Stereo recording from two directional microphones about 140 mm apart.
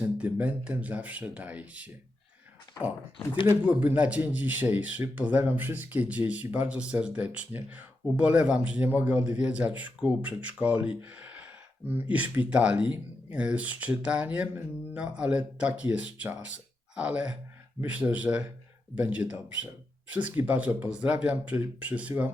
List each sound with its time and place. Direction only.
0.0 s speech: 10° right (ahead or behind)
3.4 s speech: 10° right (ahead or behind)